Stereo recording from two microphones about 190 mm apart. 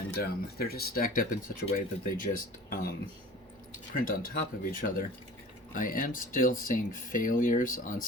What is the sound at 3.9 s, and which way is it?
Speech, 45° left (ahead or behind).